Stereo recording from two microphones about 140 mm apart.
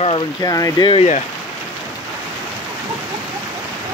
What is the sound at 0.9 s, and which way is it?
Speech, 50° left (ahead or behind).